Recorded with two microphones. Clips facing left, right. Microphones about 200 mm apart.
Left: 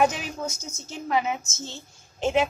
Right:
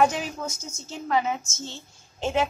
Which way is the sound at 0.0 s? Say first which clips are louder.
Right 1 dB; 20° left (ahead or behind).